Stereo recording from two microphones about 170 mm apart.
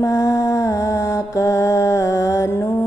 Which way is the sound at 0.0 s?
20° left (ahead or behind).